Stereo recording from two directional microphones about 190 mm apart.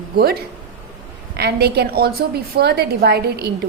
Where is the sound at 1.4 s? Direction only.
60° right (ahead or behind).